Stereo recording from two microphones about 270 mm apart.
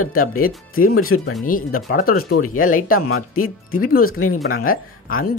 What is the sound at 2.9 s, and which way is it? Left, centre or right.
Speech, left.